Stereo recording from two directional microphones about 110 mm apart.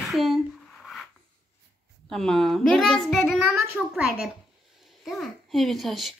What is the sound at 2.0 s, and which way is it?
A child's voice, 5° left (ahead or behind).